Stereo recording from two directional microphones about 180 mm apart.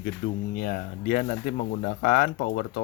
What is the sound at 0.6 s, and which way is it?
Speech, 50° left (ahead or behind).